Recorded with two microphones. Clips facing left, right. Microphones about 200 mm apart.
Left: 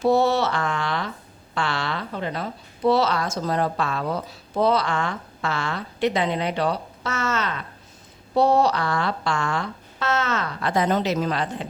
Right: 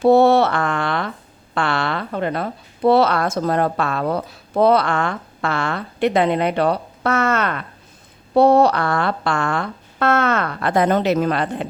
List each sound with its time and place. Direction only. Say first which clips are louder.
0.0 s a woman's voice: right 7 dB; 60° right (ahead or behind)